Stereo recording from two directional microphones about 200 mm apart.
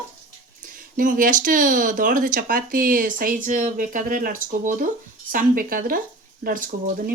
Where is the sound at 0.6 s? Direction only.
40° right (ahead or behind).